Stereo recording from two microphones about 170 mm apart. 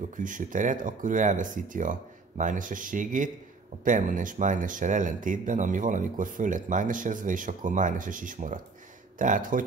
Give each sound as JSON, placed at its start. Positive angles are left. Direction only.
{"t": 0.1, "sound": "speech", "side_deg": -50}